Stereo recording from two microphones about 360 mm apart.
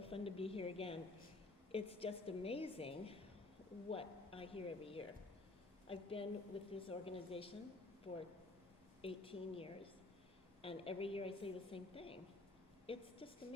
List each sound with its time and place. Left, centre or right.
0.0 s a woman's voice: centre